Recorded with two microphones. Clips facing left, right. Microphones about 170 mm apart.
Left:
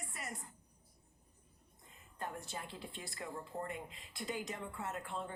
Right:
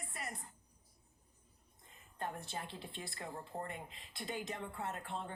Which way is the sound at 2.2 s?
25° right (ahead or behind).